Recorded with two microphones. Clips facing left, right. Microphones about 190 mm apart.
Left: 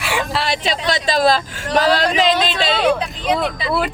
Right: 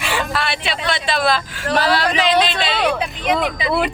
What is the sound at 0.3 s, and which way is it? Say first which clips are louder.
A man's voice: left 2 dB; 40° left (ahead or behind).